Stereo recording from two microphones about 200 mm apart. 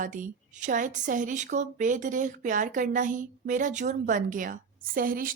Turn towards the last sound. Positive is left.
turn(degrees=-45)  # may be behind; listen again after turning